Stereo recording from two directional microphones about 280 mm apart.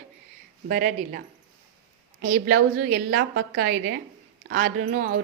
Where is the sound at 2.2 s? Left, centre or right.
Right.